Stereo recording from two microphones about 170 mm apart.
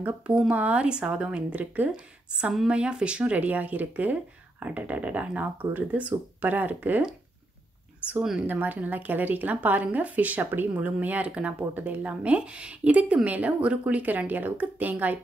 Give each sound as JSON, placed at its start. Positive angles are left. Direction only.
{"t": 0.0, "sound": "a woman's voice", "side_deg": -5}